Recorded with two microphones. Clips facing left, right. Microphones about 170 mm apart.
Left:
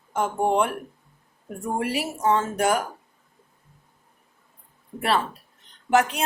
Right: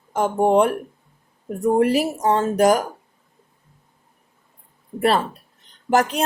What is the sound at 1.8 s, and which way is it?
Speech, 40° right (ahead or behind).